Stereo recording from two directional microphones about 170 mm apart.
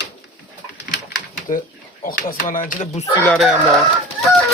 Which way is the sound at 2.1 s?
55° left (ahead or behind).